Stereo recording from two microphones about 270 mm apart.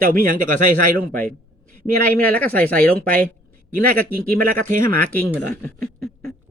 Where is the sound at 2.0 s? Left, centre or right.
Centre.